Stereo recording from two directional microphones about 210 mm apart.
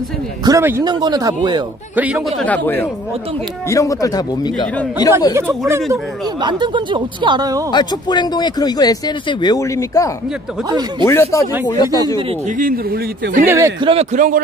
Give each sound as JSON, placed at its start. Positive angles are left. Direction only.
{"t": 0.5, "sound": "speech", "side_deg": -10}
{"t": 2.0, "sound": "speech", "side_deg": -5}
{"t": 6.4, "sound": "speech", "side_deg": -20}
{"t": 7.7, "sound": "speech", "side_deg": 20}
{"t": 10.7, "sound": "speech", "side_deg": -20}
{"t": 11.1, "sound": "speech", "side_deg": 15}
{"t": 12.2, "sound": "speech", "side_deg": -25}
{"t": 12.5, "sound": "speech", "side_deg": -45}
{"t": 13.5, "sound": "speech", "side_deg": -15}
{"t": 13.8, "sound": "speech", "side_deg": -35}